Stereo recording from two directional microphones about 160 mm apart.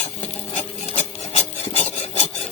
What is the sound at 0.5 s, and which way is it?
Filing, 45° left (ahead or behind).